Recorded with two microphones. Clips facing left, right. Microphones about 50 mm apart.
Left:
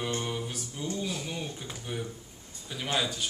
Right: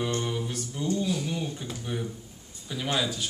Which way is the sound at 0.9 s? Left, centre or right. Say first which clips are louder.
Right 6 dB; centre.